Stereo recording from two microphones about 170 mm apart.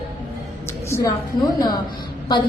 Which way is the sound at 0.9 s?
15° left (ahead or behind).